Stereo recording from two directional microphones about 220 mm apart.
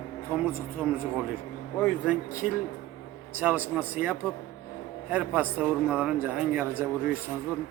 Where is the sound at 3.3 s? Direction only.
10° right (ahead or behind).